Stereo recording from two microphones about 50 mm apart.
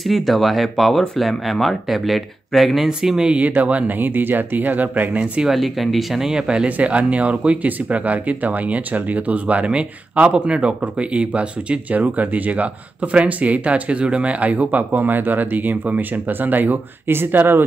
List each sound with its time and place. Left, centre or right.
0.0 s speech: centre
2.9 s speech: centre
3.3 s speech: right
5.2 s speech: right
5.5 s speech: centre; by 16.8 s right
17.1 s speech: right